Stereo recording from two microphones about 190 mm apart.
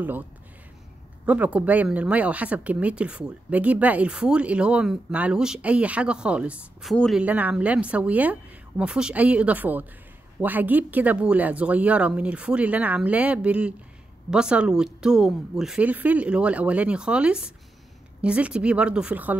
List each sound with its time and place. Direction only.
1.2 s a woman's voice: 5° right (ahead or behind)